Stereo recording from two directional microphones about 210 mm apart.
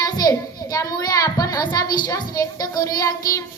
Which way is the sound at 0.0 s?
15° left (ahead or behind).